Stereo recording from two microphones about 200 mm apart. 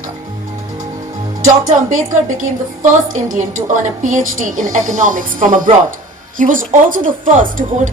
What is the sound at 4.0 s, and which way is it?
Speech, 40° right (ahead or behind).